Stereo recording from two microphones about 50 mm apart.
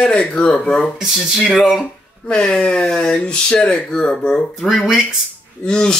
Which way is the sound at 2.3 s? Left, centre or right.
Centre.